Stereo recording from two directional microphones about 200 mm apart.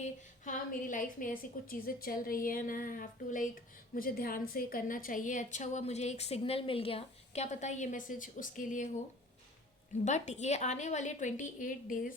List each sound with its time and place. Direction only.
0.4 s a woman's voice: 40° left (ahead or behind)
10.0 s a woman's voice: 35° left (ahead or behind)